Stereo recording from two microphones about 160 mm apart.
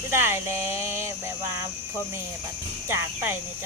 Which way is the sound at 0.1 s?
15° right (ahead or behind).